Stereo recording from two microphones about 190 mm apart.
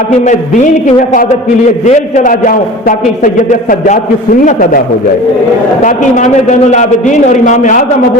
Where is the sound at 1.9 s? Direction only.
40° left (ahead or behind).